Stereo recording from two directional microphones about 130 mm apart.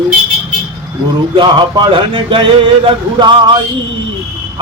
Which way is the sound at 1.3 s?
35° right (ahead or behind).